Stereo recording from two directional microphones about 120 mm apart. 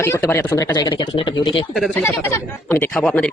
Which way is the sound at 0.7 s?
35° left (ahead or behind).